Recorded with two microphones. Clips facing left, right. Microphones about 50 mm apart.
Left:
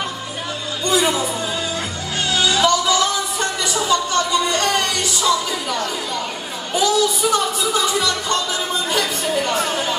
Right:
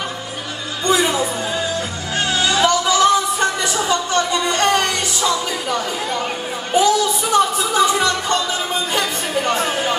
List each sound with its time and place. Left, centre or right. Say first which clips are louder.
0.8 s music: right 1 dB; right
2.2 s a sound: even; right
6.7 s music: right 2 dB; right